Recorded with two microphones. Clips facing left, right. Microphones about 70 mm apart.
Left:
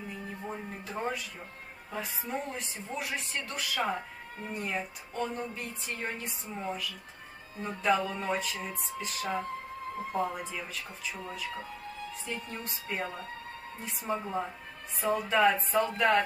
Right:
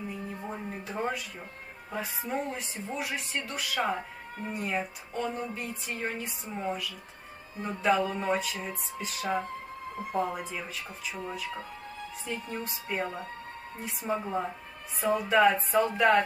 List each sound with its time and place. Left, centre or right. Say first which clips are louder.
0.4 s music: right 2 dB; centre
2.0 s speech: right 3 dB; centre
12.3 s speech: right 5 dB; centre
13.0 s speech: right 3 dB; right
14.0 s speech: right 2 dB; centre